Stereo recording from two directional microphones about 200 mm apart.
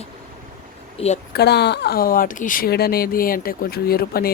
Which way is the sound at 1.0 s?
35° left (ahead or behind).